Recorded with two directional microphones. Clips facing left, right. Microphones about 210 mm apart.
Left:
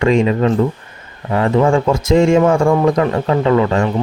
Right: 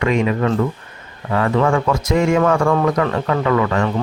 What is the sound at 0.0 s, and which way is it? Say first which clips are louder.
Speech: left 4 dB; 30° left (ahead or behind).